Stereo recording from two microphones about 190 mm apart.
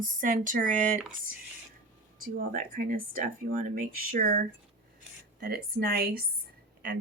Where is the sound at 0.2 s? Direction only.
45° right (ahead or behind).